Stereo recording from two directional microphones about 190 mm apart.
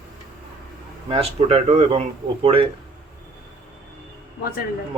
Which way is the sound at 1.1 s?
30° right (ahead or behind).